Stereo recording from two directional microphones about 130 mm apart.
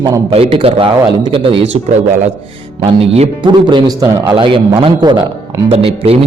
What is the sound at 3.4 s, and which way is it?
A man's voice, 35° right (ahead or behind).